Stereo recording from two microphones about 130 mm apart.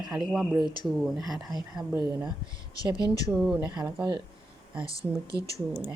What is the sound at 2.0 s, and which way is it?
A woman's voice, 30° right (ahead or behind).